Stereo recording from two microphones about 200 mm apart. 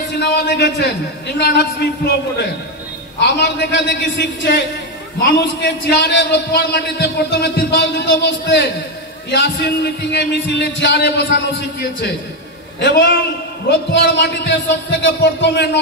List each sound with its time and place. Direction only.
0.2 s a man's voice: 55° left (ahead or behind)
13.7 s a man's voice: 55° left (ahead or behind)